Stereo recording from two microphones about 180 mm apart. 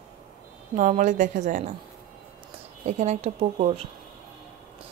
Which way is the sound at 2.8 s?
35° right (ahead or behind).